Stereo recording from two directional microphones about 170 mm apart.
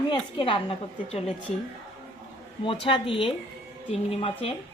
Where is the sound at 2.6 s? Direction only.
30° left (ahead or behind).